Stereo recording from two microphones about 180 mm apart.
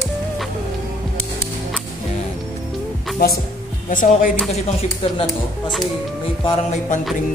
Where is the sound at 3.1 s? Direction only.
60° left (ahead or behind).